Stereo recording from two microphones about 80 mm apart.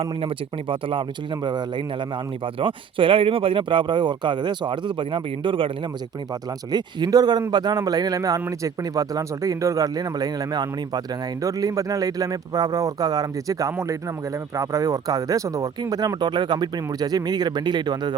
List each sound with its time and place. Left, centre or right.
0.3 s speech: right
6.7 s speech: right
11.4 s speech: right
15.8 s speech: right